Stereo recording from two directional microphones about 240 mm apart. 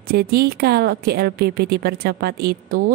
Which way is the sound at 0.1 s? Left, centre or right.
Right.